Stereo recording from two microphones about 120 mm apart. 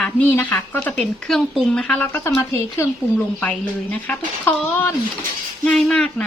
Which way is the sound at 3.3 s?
10° left (ahead or behind).